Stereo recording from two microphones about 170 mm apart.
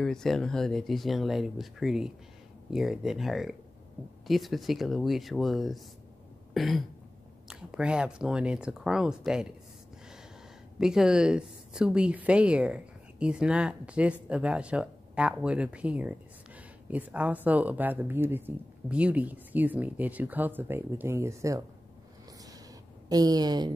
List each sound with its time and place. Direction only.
0.0 s speech: 5° left (ahead or behind)
6.5 s throat clearing: centre (ahead or behind)
7.4 s speech: 5° right (ahead or behind)
10.8 s a woman's voice: 5° right (ahead or behind)
23.0 s a woman's voice: 20° right (ahead or behind)